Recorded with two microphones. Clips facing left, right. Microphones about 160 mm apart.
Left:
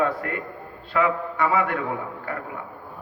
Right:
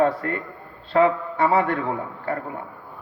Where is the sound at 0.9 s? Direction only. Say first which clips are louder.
Right 4 dB; 35° right (ahead or behind).